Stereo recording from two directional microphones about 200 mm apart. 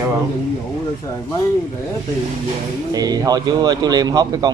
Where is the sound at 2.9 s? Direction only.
20° right (ahead or behind).